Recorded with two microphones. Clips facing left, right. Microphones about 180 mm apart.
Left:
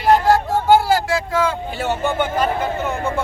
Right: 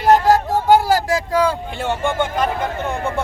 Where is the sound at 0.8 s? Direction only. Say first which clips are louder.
Right 1 dB; 40° right (ahead or behind).